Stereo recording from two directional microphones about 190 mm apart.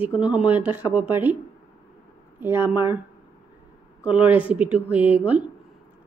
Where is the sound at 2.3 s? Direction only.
10° right (ahead or behind).